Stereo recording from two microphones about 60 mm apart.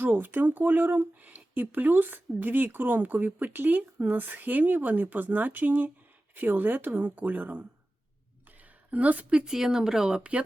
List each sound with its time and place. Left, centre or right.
0.0 s speech: right